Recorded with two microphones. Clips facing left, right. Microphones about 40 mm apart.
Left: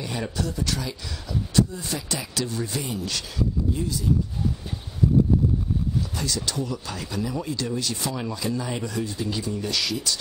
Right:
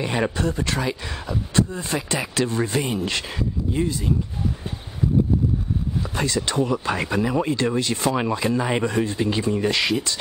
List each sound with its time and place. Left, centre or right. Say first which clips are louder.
0.0 s speech: right 6 dB; right
6.1 s speech: right 6 dB; right